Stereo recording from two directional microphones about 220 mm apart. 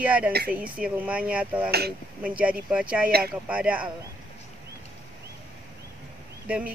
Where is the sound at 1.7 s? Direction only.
45° right (ahead or behind).